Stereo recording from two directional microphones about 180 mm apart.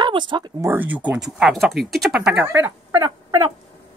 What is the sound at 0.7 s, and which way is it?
Speech, 10° right (ahead or behind).